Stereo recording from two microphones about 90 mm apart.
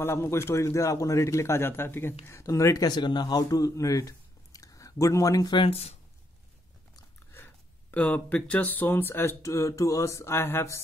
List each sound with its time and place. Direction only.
0.0 s a man's voice: 25° left (ahead or behind)
5.5 s speech: 80° left
7.3 s speech: 20° left (ahead or behind)